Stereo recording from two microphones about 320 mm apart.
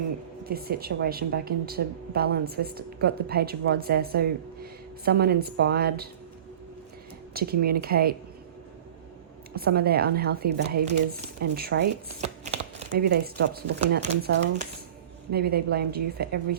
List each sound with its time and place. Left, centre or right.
0.4 s a woman's voice: right
7.3 s a woman's voice: right
9.6 s a woman's voice: right
12.9 s a woman's voice: right